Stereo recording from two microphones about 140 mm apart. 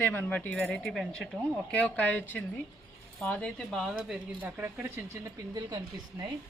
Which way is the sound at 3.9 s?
10° right (ahead or behind).